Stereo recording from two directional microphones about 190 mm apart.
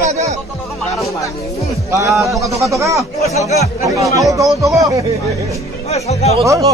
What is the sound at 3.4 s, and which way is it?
Speech, 35° left (ahead or behind).